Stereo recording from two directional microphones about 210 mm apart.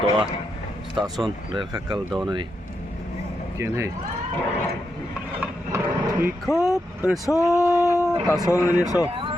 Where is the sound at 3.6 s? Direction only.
10° right (ahead or behind).